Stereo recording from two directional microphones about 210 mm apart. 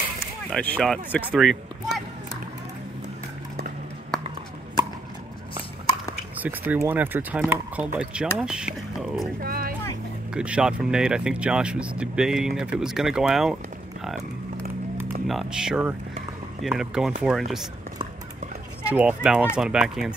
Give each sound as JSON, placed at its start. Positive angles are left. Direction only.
{"t": 0.5, "sound": "speech", "side_deg": 5}
{"t": 6.4, "sound": "speech", "side_deg": -10}
{"t": 9.4, "sound": "speech", "side_deg": -45}
{"t": 10.3, "sound": "speech", "side_deg": -5}
{"t": 15.2, "sound": "speech", "side_deg": 0}
{"t": 18.9, "sound": "speech", "side_deg": -5}